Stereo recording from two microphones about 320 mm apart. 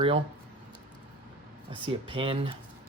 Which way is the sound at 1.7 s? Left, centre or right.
Centre.